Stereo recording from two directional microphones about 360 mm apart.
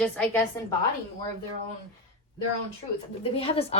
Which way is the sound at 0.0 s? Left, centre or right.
Centre.